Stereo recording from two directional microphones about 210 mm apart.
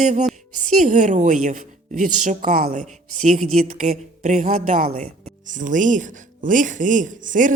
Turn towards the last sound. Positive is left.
turn(degrees=-40)  # may be behind; listen again after turning